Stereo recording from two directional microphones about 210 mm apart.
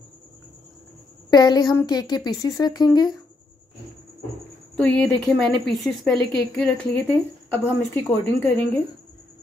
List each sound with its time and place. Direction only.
1.3 s a woman's voice: 20° left (ahead or behind)
4.7 s a woman's voice: 5° left (ahead or behind)